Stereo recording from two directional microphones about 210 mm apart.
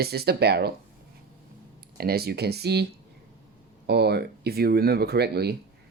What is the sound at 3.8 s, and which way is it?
Speech, 50° right (ahead or behind).